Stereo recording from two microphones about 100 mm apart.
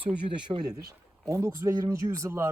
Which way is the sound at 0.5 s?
40° right (ahead or behind).